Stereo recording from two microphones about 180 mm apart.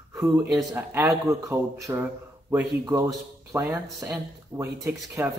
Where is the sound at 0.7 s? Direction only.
10° right (ahead or behind).